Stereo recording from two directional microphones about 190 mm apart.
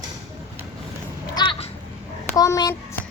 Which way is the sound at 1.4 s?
30° left (ahead or behind).